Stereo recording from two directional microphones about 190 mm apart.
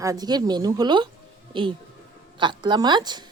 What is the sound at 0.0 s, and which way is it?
Speech, 20° right (ahead or behind).